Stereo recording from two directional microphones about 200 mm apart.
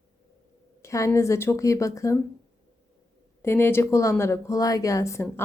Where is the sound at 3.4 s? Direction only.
10° left (ahead or behind).